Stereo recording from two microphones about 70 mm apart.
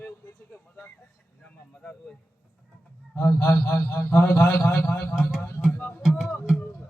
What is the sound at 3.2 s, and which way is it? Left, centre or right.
A man's voice, left.